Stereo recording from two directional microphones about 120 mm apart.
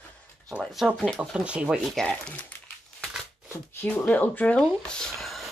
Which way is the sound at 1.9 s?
10° left (ahead or behind).